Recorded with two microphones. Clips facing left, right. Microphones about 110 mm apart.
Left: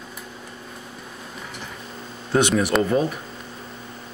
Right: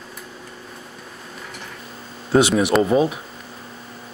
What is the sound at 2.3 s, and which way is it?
Speech, 5° right (ahead or behind).